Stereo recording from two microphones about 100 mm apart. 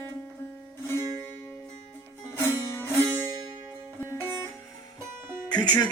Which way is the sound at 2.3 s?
25° left (ahead or behind).